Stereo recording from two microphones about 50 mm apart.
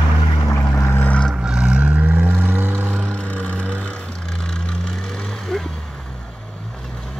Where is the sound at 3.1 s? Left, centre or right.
Left.